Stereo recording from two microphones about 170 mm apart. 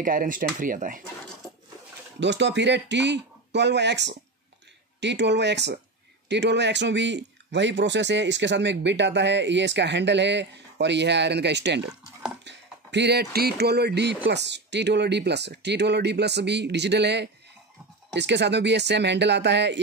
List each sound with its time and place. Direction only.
0.0 s speech: 55° right (ahead or behind)
2.1 s speech: 90° right